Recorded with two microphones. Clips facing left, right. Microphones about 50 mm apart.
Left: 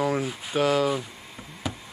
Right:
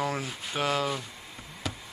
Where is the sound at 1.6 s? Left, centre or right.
Centre.